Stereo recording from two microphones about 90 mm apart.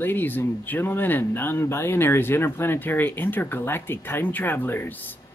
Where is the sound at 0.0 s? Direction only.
25° left (ahead or behind).